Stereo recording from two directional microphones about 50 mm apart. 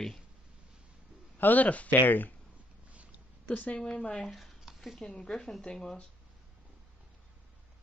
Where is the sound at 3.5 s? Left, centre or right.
Left.